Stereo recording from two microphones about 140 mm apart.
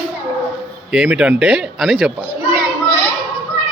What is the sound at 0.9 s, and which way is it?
Speech, 5° right (ahead or behind).